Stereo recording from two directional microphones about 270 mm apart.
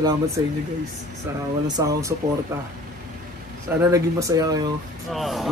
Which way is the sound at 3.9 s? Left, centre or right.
Centre.